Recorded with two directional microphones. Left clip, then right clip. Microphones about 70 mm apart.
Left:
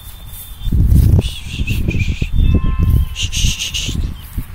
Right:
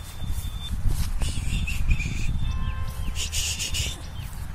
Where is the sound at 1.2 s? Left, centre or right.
Centre.